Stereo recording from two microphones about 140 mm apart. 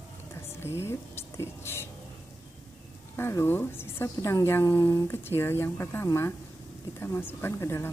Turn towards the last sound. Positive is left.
turn(degrees=20)  # may be behind; listen again after turning